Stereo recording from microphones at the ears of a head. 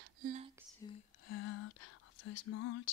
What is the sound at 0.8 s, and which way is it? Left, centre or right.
Whispering, left.